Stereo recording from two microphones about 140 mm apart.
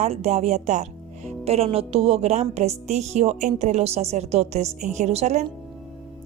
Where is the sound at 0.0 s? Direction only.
50° right (ahead or behind).